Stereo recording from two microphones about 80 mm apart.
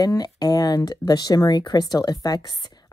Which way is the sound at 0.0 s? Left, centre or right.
Left.